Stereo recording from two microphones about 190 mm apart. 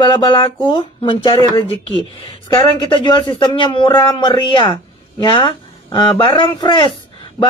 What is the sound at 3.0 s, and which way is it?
Speech, 25° left (ahead or behind).